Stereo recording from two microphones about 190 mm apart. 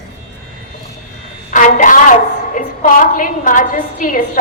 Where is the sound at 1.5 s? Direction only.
45° left (ahead or behind).